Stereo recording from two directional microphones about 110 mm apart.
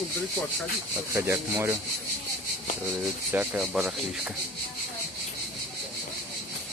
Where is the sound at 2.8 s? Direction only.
15° right (ahead or behind).